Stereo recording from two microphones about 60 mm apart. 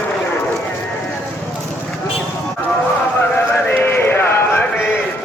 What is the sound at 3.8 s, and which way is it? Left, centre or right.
Music, left.